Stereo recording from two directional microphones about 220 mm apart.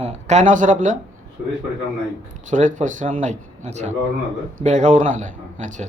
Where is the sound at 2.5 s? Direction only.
35° right (ahead or behind).